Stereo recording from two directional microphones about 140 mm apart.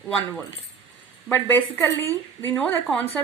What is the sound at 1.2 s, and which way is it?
Speech, 15° left (ahead or behind).